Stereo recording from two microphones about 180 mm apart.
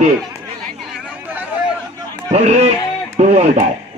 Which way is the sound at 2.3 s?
35° right (ahead or behind).